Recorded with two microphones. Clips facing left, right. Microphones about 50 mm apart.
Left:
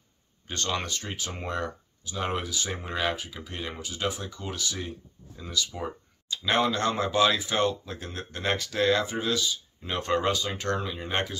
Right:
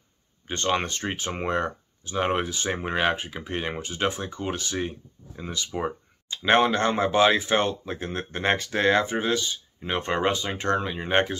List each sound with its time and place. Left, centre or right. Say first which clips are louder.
0.5 s speech: right 5 dB; right
5.8 s a sound: right 6 dB; right
6.4 s speech: right 5 dB; right